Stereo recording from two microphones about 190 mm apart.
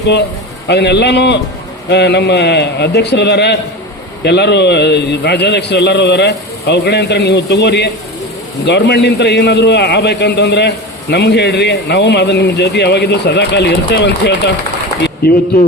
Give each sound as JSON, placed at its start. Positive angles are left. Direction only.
{"t": 0.7, "sound": "a man's voice", "side_deg": 65}